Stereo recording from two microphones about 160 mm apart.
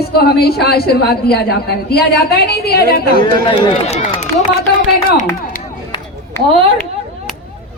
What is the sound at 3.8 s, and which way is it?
Speech, 45° left (ahead or behind).